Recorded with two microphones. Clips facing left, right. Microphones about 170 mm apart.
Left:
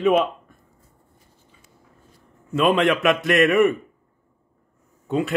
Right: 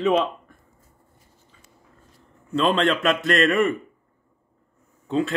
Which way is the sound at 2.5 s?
10° left (ahead or behind).